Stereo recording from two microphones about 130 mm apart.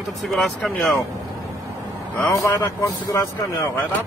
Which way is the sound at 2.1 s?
15° left (ahead or behind).